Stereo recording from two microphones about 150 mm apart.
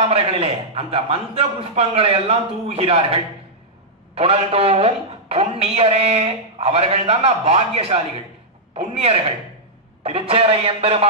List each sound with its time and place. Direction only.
0.1 s a woman's voice: 40° right (ahead or behind)